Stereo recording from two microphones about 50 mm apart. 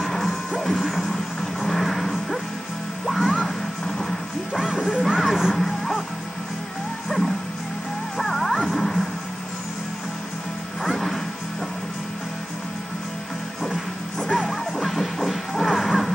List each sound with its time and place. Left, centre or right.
0.0 s music: centre
4.9 s music: centre
5.5 s music: centre
7.1 s music: centre
10.8 s music: centre
14.2 s music: centre